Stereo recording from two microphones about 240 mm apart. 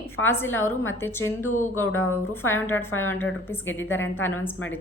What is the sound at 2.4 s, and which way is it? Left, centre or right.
A woman's voice, centre.